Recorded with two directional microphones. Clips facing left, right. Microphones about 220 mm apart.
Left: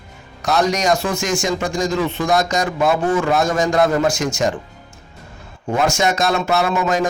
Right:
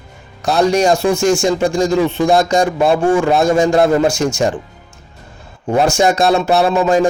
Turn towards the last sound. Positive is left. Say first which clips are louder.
# right 5 dB
turn(degrees=-30)  # may be behind; listen again after turning